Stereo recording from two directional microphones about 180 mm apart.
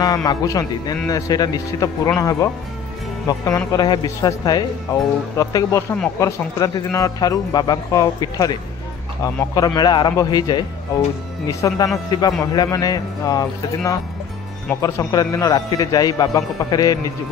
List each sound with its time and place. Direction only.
0.0 s speech: 20° left (ahead or behind)